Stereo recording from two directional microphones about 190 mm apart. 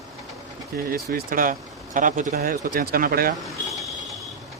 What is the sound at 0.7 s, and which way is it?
Speech, 55° right (ahead or behind).